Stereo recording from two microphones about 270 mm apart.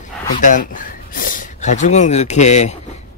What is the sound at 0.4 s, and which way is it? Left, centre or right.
Speech, left.